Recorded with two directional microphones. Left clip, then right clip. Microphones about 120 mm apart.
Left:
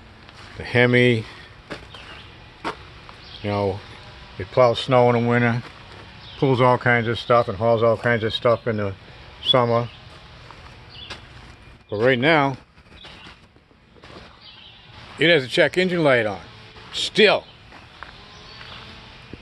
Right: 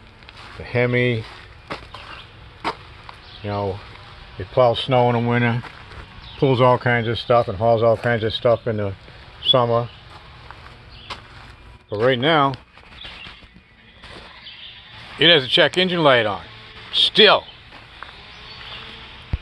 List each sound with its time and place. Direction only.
0.6 s speech: 60° left (ahead or behind)
3.4 s speech: 70° left (ahead or behind)
4.4 s speech: 15° left (ahead or behind)
5.3 s speech: 5° left (ahead or behind)
9.4 s speech: 15° left (ahead or behind)
11.9 s speech: 20° left (ahead or behind)
15.1 s a man's voice: 30° left (ahead or behind)